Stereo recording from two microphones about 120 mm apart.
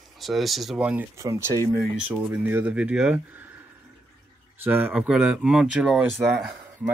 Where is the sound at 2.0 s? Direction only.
15° right (ahead or behind).